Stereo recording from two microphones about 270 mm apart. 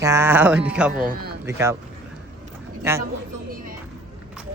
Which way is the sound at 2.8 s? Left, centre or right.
Centre.